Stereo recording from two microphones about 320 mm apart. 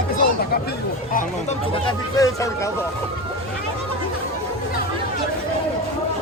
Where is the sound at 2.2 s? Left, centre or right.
Centre.